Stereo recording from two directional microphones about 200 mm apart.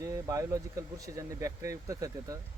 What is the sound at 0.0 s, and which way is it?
Speech, 15° right (ahead or behind).